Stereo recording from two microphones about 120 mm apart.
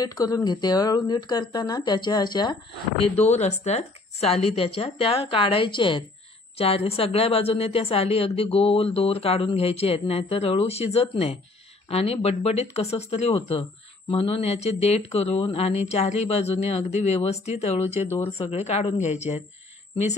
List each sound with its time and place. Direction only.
0.0 s speech: 30° left (ahead or behind)
3.0 s a woman's voice: 65° left (ahead or behind); by 6.0 s 45° left (ahead or behind)
6.6 s a woman's voice: 60° left (ahead or behind)